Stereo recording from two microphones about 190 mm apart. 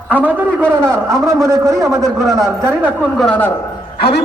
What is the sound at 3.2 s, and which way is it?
Speech, 10° left (ahead or behind).